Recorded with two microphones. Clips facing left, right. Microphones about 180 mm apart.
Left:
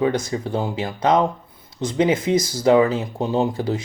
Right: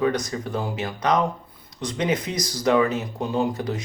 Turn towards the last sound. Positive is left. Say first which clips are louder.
# left 3 dB
turn(degrees=25)  # may be behind; listen again after turning